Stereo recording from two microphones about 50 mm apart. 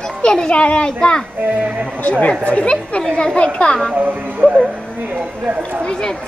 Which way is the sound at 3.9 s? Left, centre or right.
Right.